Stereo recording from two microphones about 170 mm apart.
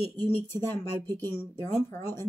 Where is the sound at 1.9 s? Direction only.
10° left (ahead or behind).